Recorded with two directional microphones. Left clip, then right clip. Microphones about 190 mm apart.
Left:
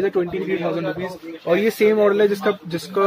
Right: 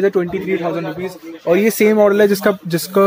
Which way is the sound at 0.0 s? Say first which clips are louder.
Right 4 dB; 50° right (ahead or behind).